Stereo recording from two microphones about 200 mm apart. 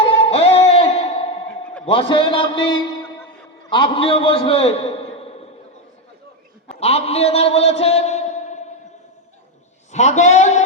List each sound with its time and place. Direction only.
0.0 s music: 30° left (ahead or behind)
1.8 s a man's voice: 25° left (ahead or behind)
6.7 s a man's voice: 30° left (ahead or behind)
9.9 s speech: 35° left (ahead or behind)